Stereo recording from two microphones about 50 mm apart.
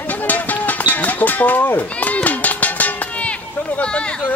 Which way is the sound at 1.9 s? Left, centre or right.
Left.